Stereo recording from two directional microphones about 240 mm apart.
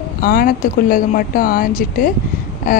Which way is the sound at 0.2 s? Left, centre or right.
Left.